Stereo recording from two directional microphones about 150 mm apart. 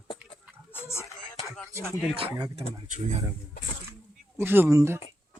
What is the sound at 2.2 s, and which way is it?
Speech, 35° right (ahead or behind).